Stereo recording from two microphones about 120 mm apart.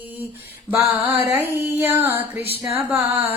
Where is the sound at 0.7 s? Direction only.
15° right (ahead or behind).